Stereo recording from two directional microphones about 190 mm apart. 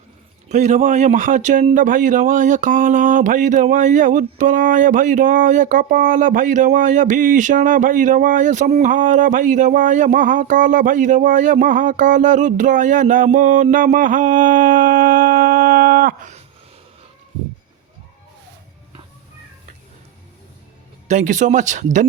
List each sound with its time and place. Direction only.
0.4 s speech: 40° right (ahead or behind)
21.1 s speech: 40° right (ahead or behind)